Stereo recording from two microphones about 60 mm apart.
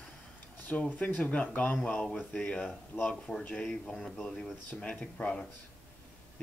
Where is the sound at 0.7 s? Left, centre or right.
Left.